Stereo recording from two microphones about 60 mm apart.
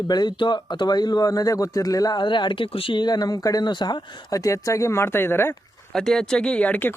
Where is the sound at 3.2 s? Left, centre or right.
Left.